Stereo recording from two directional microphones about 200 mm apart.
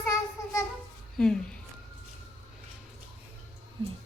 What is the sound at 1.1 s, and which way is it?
Speech, 5° left (ahead or behind).